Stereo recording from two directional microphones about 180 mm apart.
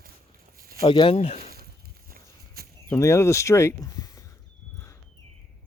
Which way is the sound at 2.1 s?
60° right (ahead or behind).